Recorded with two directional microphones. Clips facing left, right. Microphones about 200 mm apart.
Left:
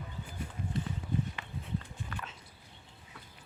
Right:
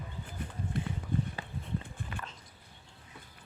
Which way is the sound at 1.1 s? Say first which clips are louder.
Right 1 dB; 55° right (ahead or behind).